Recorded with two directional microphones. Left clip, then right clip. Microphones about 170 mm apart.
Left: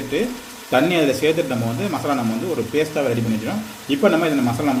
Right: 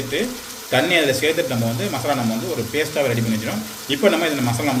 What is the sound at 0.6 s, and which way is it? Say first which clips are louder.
Speech: even; 60° left (ahead or behind).